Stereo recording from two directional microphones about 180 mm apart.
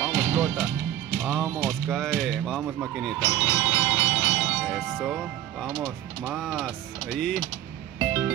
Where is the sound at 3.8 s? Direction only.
15° left (ahead or behind).